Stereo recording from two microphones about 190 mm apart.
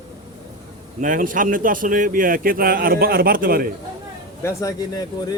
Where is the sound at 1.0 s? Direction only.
45° right (ahead or behind).